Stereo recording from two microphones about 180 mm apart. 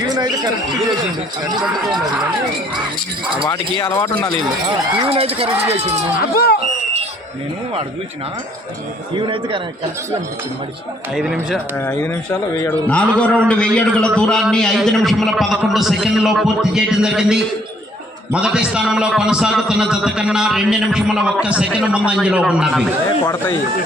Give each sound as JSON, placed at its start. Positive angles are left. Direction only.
{"t": 0.0, "sound": "a sound", "side_deg": -20}
{"t": 3.4, "sound": "speech", "side_deg": 20}
{"t": 4.6, "sound": "speech", "side_deg": -30}
{"t": 6.3, "sound": "speech", "side_deg": 60}
{"t": 9.1, "sound": "a man's voice", "side_deg": -30}
{"t": 11.1, "sound": "a man's voice", "side_deg": 0}
{"t": 11.9, "sound": "a man's voice", "side_deg": 15}
{"t": 23.2, "sound": "speech", "side_deg": 20}